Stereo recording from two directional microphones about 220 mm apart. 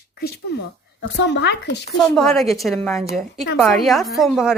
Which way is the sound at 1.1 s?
50° left (ahead or behind).